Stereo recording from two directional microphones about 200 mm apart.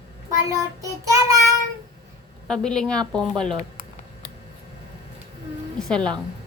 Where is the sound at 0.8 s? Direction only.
15° right (ahead or behind).